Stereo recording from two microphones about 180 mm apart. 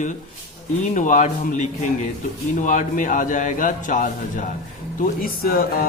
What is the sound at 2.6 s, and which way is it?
Speech, 45° left (ahead or behind).